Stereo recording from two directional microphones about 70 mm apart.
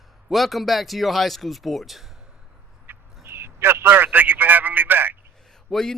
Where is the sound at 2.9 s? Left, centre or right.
Right.